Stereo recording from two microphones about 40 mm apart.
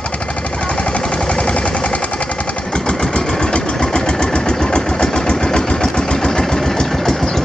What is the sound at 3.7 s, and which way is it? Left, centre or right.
Vehicle, centre.